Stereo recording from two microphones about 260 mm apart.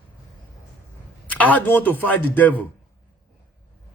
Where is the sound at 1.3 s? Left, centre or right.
Centre.